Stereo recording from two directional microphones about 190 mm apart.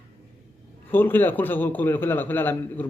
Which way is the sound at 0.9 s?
10° left (ahead or behind).